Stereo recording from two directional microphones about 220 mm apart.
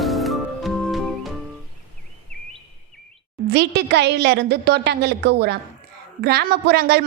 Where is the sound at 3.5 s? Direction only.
50° right (ahead or behind).